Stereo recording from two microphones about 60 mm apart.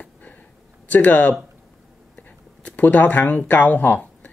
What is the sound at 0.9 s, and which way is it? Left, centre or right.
Speech, left.